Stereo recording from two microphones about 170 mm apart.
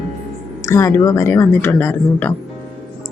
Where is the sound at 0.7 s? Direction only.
15° left (ahead or behind).